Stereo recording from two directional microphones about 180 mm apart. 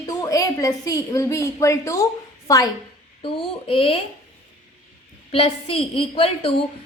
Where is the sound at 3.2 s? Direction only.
30° left (ahead or behind).